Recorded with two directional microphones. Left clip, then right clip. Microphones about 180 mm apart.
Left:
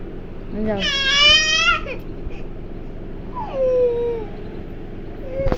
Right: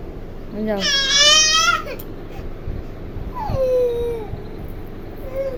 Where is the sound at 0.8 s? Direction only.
35° right (ahead or behind).